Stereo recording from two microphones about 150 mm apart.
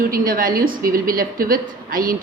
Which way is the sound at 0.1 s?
70° right (ahead or behind).